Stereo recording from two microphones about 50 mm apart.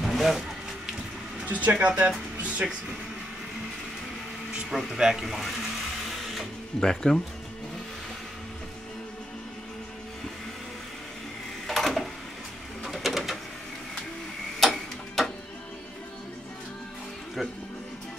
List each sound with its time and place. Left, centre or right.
0.0 s music: centre
1.4 s speech: right
2.4 s music: right
4.6 s speech: centre
4.9 s speech: centre
5.2 s a sound: centre
6.8 s speech: centre
11.6 s a sound: centre
12.8 s bird: centre
14.6 s clock: centre